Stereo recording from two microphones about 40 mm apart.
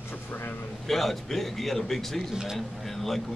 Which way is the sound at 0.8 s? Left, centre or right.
Centre.